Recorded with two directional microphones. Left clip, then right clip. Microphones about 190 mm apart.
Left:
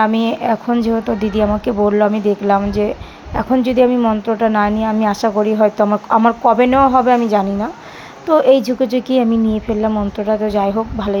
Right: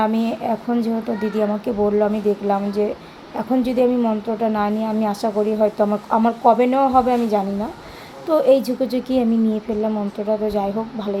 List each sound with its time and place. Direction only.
0.0 s speech: 20° left (ahead or behind)